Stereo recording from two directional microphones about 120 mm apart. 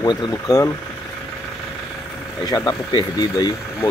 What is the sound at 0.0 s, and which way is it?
Speech, 30° left (ahead or behind).